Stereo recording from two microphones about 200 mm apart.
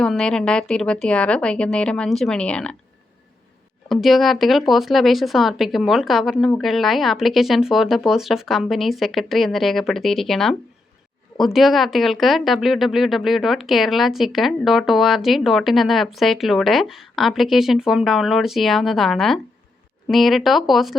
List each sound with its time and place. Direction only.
0.0 s speech: 5° left (ahead or behind)
3.8 s speech: centre (ahead or behind)